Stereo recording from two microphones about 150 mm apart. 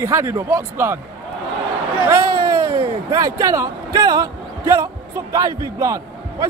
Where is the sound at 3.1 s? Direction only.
20° right (ahead or behind).